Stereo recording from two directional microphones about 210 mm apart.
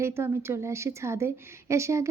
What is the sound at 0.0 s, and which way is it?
A woman's voice, 10° right (ahead or behind).